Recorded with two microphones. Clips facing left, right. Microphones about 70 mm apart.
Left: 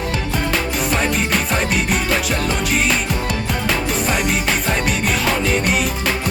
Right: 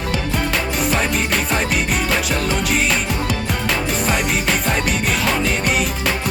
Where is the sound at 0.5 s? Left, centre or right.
Centre.